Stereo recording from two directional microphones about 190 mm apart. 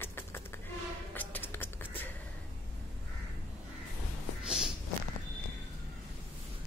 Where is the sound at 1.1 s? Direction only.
10° left (ahead or behind).